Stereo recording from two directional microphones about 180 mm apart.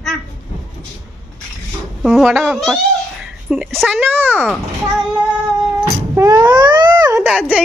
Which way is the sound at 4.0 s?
10° right (ahead or behind).